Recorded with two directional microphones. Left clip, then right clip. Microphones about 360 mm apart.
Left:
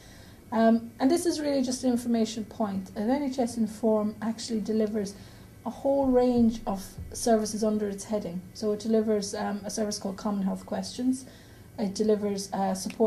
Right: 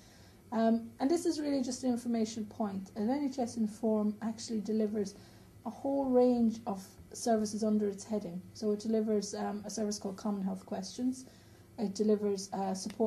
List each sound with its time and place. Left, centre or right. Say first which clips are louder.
0.5 s a woman's voice: left 7 dB; right